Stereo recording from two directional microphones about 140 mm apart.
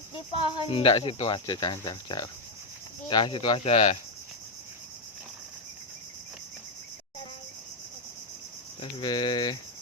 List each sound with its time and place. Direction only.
0.3 s speech: 40° left (ahead or behind)
8.8 s speech: 30° left (ahead or behind)